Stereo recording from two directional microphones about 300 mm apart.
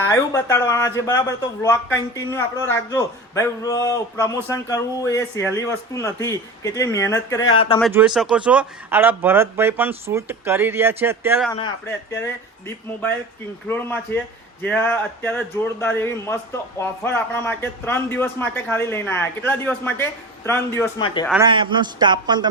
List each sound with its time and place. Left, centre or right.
0.0 s speech: centre
7.8 s speech: centre
12.1 s speech: centre
21.2 s speech: centre